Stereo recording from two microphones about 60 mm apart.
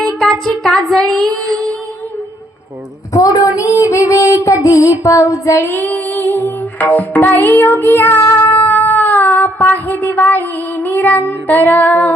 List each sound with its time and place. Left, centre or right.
0.0 s music: centre
0.9 s child singing: centre
3.1 s child singing: left
5.6 s music: left
8.4 s speech: left